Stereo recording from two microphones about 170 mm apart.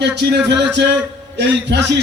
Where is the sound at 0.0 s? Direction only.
90° right.